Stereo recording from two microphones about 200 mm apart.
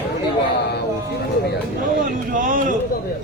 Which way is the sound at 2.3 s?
40° right (ahead or behind).